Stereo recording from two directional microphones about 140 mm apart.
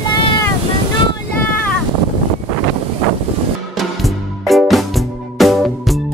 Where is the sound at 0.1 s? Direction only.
35° left (ahead or behind).